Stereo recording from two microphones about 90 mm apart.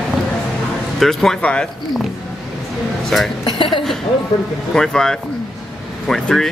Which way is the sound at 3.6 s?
65° left (ahead or behind).